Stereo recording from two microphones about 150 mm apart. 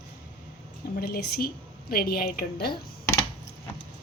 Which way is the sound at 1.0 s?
90° left.